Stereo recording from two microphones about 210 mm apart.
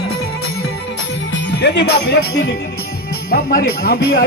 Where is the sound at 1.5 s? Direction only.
55° left (ahead or behind).